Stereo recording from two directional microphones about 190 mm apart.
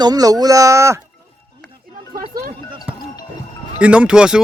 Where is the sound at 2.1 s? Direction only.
50° right (ahead or behind).